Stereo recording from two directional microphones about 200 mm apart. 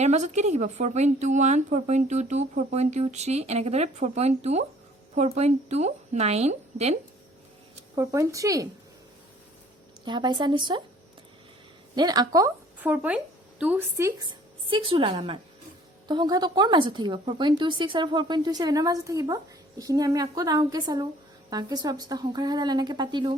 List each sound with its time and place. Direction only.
0.0 s speech: 35° right (ahead or behind)
7.9 s speech: 15° right (ahead or behind)
10.0 s a woman's voice: 20° right (ahead or behind)
11.9 s a woman's voice: 20° right (ahead or behind)